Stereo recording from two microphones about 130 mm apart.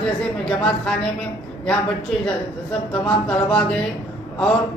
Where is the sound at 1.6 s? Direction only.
5° left (ahead or behind).